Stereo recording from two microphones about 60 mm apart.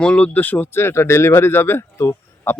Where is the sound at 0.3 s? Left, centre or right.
Left.